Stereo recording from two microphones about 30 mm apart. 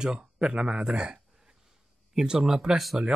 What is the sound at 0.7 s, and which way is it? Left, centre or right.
Speech, centre.